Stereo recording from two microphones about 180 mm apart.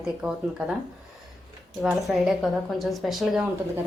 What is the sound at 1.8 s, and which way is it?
A woman's voice, centre (ahead or behind).